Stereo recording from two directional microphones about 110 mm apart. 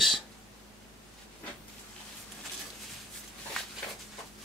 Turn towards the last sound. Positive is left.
turn(degrees=5)  # may be behind; listen again after turning